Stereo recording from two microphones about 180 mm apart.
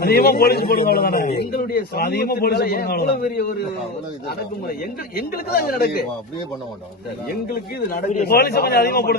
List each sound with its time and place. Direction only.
0.0 s a man's voice: 60° left (ahead or behind)
5.1 s a man's voice: 60° left (ahead or behind)
7.3 s a man's voice: 55° left (ahead or behind)